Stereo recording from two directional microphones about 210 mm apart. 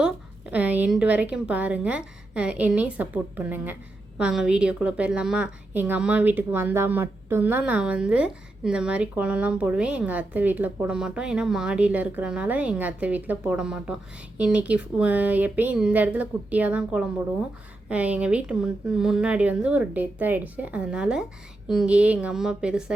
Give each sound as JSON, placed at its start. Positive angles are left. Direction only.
{"t": 0.5, "sound": "a woman's voice", "side_deg": -5}